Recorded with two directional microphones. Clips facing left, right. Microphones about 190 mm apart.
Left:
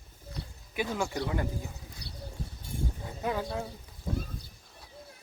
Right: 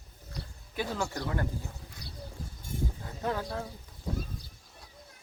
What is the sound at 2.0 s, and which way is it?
Bird, 70° left (ahead or behind).